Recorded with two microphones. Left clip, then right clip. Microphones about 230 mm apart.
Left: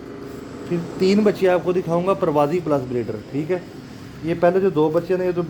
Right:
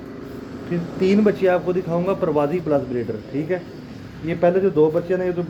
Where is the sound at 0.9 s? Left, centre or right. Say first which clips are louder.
Even; left.